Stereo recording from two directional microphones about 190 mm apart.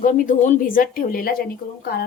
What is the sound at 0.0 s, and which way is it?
A woman's voice, 45° left (ahead or behind).